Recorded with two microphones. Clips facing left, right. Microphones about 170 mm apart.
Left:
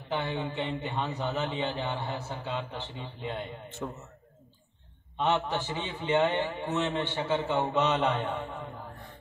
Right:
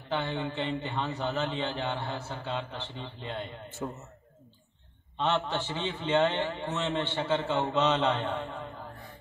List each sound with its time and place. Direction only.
0.2 s a man's voice: 15° left (ahead or behind)
3.8 s a man's voice: 10° right (ahead or behind)
5.1 s a man's voice: 15° left (ahead or behind)